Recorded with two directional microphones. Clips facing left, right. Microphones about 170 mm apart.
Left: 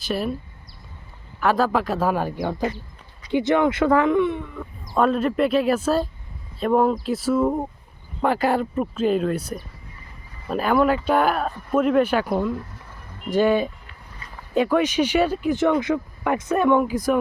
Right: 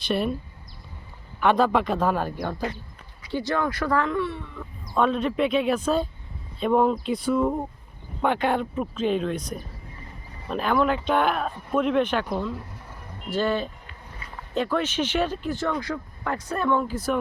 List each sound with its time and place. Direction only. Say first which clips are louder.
0.0 s speech: even; 5° left (ahead or behind)
1.4 s speech: even; centre (ahead or behind)